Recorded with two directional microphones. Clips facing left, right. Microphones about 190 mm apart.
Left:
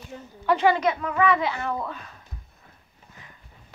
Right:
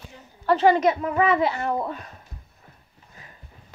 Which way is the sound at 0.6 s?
40° right (ahead or behind).